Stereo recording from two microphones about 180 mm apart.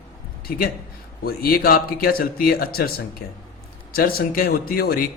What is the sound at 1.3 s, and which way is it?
Speech, 55° left (ahead or behind).